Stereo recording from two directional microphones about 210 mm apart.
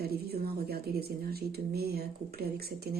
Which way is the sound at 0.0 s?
50° right (ahead or behind).